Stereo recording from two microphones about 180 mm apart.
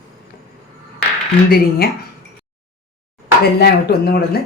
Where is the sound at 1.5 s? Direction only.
60° left (ahead or behind).